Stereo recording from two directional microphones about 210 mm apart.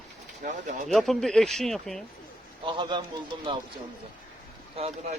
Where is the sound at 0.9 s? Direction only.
Centre (ahead or behind).